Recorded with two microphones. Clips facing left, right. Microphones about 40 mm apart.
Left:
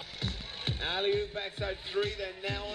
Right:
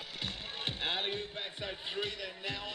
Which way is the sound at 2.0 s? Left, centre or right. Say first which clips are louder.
Left 7 dB; left.